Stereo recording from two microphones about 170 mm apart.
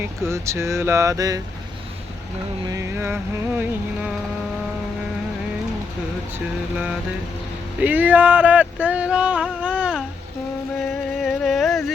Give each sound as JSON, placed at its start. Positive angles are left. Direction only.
{"t": 0.3, "sound": "speech", "side_deg": -15}
{"t": 2.6, "sound": "speech", "side_deg": -15}
{"t": 6.3, "sound": "speech", "side_deg": -5}
{"t": 11.2, "sound": "a sound", "side_deg": 0}